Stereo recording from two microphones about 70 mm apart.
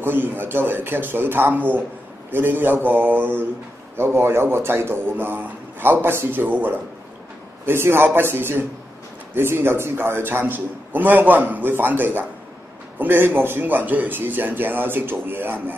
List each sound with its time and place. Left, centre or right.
0.0 s a man's voice: right
3.9 s a man's voice: right